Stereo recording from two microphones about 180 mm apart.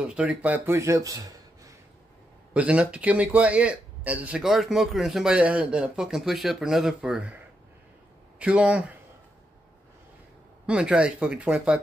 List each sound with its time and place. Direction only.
0.0 s speech: 5° right (ahead or behind)
2.5 s speech: 5° right (ahead or behind)
8.4 s speech: 5° right (ahead or behind)
10.7 s speech: 5° right (ahead or behind)